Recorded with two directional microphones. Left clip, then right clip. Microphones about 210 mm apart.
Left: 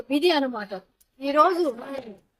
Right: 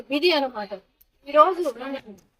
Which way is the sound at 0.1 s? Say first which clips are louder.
Right 1 dB; 10° left (ahead or behind).